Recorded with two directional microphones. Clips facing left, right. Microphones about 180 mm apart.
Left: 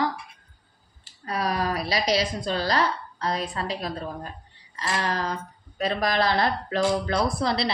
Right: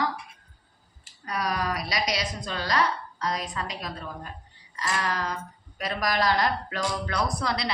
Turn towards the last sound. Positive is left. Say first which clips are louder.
# left 4 dB
turn(degrees=25)  # may be behind; listen again after turning